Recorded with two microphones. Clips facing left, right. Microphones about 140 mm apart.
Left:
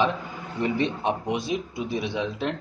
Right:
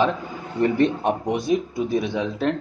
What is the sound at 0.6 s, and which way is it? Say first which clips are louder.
Speech: right 6 dB; 50° right (ahead or behind).